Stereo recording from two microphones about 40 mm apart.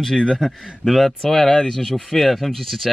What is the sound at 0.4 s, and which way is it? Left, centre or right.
Speech, centre.